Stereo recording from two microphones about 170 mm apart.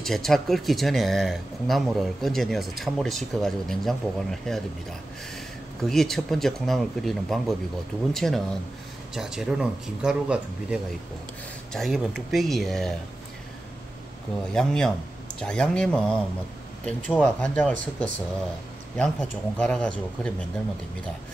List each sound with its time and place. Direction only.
0.0 s speech: centre (ahead or behind)
5.8 s speech: centre (ahead or behind)
14.5 s speech: 5° left (ahead or behind)
17.2 s speech: 5° left (ahead or behind)